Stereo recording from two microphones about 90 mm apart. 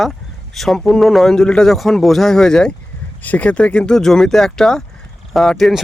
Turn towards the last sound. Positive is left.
turn(degrees=0)  # may be behind; listen again after turning